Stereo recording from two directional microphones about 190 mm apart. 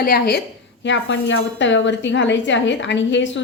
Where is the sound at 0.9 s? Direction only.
75° left (ahead or behind).